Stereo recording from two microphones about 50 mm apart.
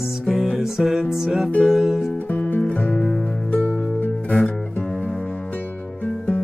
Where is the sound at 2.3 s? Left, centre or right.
Left.